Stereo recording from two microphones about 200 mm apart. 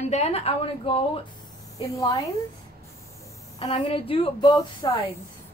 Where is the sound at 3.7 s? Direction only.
25° left (ahead or behind).